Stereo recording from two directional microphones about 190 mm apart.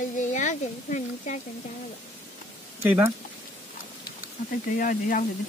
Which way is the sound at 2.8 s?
10° right (ahead or behind).